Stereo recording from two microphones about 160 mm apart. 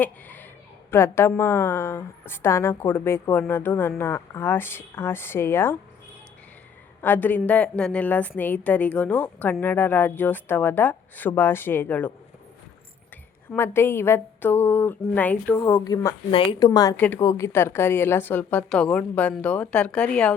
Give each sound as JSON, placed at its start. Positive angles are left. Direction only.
{"t": 0.0, "sound": "a woman's voice", "side_deg": 10}
{"t": 7.0, "sound": "a woman's voice", "side_deg": 10}
{"t": 13.6, "sound": "a woman's voice", "side_deg": 15}